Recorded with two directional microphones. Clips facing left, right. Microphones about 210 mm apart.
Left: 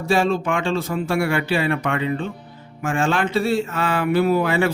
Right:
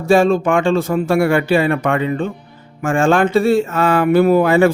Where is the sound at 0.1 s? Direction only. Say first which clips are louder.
Right 7 dB; 50° right (ahead or behind).